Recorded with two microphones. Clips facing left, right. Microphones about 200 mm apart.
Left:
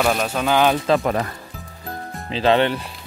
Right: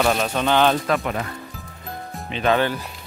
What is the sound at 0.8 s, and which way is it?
Speech, 35° left (ahead or behind).